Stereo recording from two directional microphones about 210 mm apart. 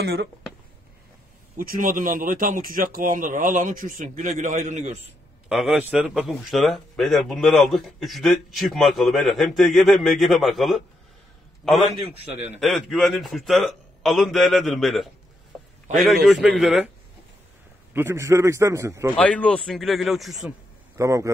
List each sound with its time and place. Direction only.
0.0 s speech: 50° right (ahead or behind)
1.6 s speech: 40° right (ahead or behind)
5.5 s speech: centre (ahead or behind)
16.3 s speech: centre (ahead or behind)
17.9 s a man's voice: 10° right (ahead or behind)
19.1 s speech: 5° left (ahead or behind)
21.0 s a man's voice: 15° right (ahead or behind)